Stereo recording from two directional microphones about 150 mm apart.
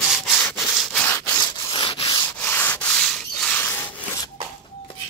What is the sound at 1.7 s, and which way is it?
Rub, 35° left (ahead or behind).